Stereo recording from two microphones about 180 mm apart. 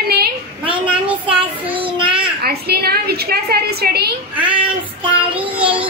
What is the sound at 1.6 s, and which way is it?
Child singing, 30° right (ahead or behind).